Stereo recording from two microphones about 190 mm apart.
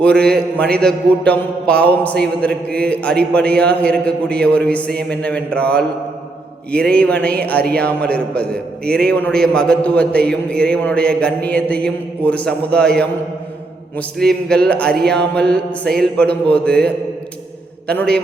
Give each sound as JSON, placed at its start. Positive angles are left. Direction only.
{"t": 0.1, "sound": "a man's voice", "side_deg": -60}
{"t": 0.8, "sound": "a man's voice", "side_deg": 5}
{"t": 14.2, "sound": "a man's voice", "side_deg": 5}